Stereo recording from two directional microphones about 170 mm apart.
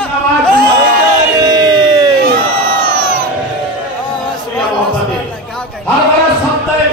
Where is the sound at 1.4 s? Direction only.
25° right (ahead or behind).